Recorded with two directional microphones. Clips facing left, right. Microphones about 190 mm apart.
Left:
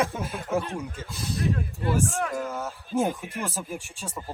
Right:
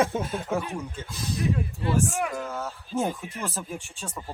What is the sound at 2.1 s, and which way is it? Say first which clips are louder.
Speech: even; 10° right (ahead or behind).